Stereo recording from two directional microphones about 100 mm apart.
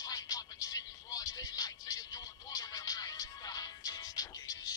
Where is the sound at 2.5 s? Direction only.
40° left (ahead or behind).